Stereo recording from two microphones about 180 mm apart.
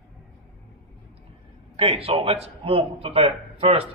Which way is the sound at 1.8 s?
30° right (ahead or behind).